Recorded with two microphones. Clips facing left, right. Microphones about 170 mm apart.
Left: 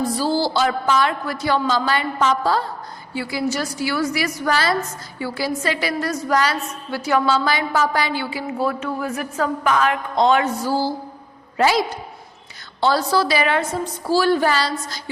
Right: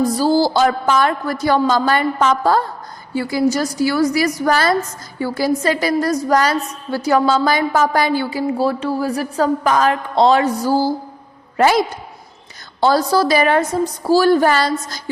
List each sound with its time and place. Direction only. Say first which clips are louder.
0.0 s a woman's voice: right 5 dB; 40° right (ahead or behind)
12.8 s a woman's voice: right 4 dB; 40° right (ahead or behind)